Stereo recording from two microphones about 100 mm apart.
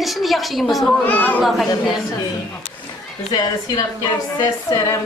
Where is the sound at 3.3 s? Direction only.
40° left (ahead or behind).